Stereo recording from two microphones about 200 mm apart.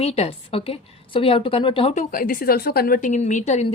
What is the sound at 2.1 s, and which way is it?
A woman's voice, 45° left (ahead or behind).